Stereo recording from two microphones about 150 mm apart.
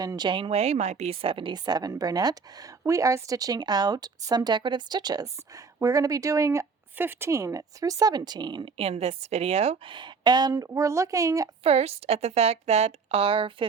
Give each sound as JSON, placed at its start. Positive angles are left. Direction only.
{"t": 0.0, "sound": "a woman's voice", "side_deg": -25}
{"t": 9.9, "sound": "a woman's voice", "side_deg": -30}
{"t": 11.6, "sound": "a woman's voice", "side_deg": -40}